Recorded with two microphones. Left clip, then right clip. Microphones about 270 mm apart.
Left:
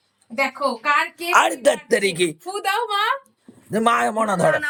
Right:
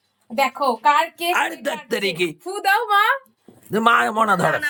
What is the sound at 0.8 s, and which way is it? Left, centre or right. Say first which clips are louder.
Speech: right 3 dB; right.